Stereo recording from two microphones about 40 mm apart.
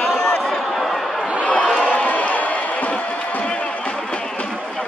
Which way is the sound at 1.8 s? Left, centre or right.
Left.